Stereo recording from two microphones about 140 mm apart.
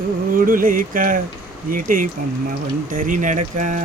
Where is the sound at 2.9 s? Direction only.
75° right (ahead or behind).